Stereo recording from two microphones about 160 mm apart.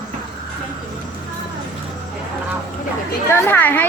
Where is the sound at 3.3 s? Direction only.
15° left (ahead or behind).